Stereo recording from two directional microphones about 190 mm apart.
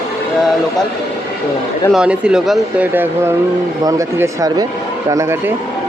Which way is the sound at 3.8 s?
20° right (ahead or behind).